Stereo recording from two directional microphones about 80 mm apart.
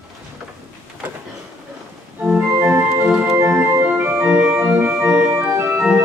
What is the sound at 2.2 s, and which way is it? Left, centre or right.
Organ, centre.